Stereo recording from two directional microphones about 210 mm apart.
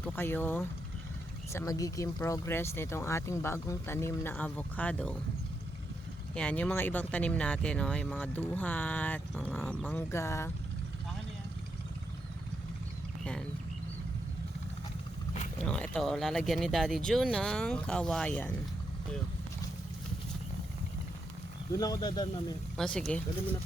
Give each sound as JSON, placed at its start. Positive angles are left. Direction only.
{"t": 0.0, "sound": "speech", "side_deg": 10}
{"t": 6.3, "sound": "speech", "side_deg": 5}
{"t": 15.6, "sound": "speech", "side_deg": 5}
{"t": 21.7, "sound": "speech", "side_deg": 20}
{"t": 22.8, "sound": "speech", "side_deg": 5}